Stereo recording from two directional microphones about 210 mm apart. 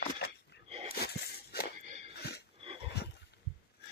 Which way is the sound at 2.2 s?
50° left (ahead or behind).